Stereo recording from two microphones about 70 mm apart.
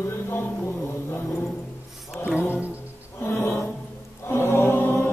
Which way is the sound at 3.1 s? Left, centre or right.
Left.